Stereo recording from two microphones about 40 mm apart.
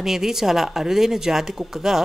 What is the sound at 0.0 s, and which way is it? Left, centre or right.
Speech, centre.